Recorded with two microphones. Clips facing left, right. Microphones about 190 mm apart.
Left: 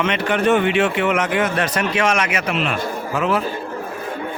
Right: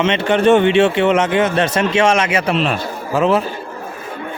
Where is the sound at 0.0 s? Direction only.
25° right (ahead or behind).